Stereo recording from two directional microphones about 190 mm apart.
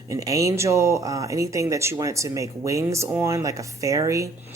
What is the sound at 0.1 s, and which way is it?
Speech, 15° right (ahead or behind).